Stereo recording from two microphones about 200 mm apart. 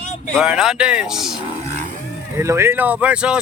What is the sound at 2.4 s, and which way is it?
Speech, 15° right (ahead or behind).